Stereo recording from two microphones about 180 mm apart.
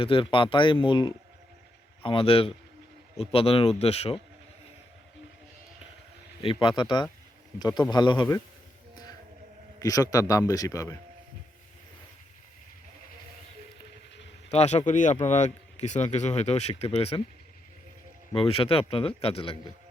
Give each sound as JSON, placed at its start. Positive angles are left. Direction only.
{"t": 0.0, "sound": "a man's voice", "side_deg": 30}
{"t": 6.4, "sound": "a man's voice", "side_deg": 30}
{"t": 9.8, "sound": "a man's voice", "side_deg": 20}
{"t": 14.5, "sound": "speech", "side_deg": 35}
{"t": 18.3, "sound": "speech", "side_deg": 30}